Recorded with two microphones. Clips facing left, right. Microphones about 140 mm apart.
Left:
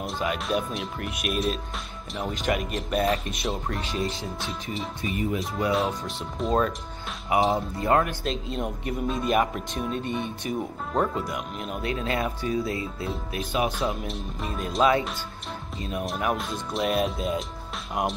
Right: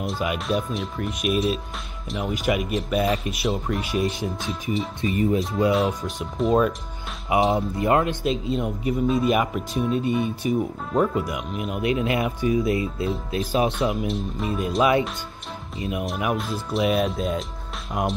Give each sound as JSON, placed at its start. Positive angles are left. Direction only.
{"t": 0.0, "sound": "speech", "side_deg": -5}
{"t": 4.0, "sound": "speech", "side_deg": -15}
{"t": 5.0, "sound": "speech", "side_deg": -30}
{"t": 5.7, "sound": "speech", "side_deg": 0}
{"t": 7.3, "sound": "speech", "side_deg": -20}
{"t": 8.3, "sound": "speech", "side_deg": 0}
{"t": 11.8, "sound": "speech", "side_deg": -20}
{"t": 13.7, "sound": "speech", "side_deg": 0}